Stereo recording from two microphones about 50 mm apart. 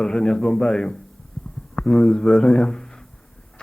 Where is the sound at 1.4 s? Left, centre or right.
Centre.